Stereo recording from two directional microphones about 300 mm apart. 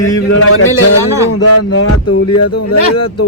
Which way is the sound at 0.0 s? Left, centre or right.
Left.